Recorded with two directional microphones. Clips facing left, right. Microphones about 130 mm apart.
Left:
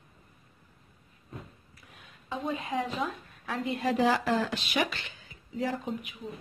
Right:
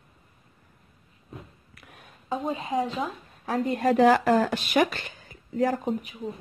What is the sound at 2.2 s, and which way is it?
A woman's voice, 35° right (ahead or behind).